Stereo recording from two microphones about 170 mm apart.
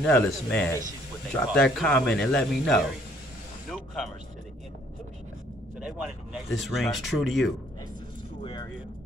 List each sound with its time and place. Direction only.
0.0 s speech: 5° left (ahead or behind)
3.7 s vehicle: centre (ahead or behind)
5.8 s speech: 5° right (ahead or behind)
8.4 s music: 25° left (ahead or behind)